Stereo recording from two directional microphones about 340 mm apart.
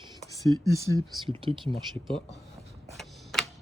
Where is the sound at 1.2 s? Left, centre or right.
Centre.